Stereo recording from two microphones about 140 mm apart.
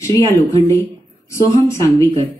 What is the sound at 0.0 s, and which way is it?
Speech, 25° left (ahead or behind).